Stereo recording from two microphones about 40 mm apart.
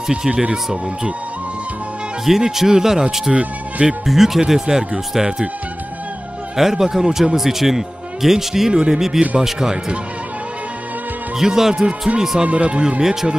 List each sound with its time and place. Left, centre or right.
0.3 s speech: right
2.2 s speech: centre
6.5 s speech: centre
11.3 s speech: centre
12.4 s speech: right
13.0 s speech: centre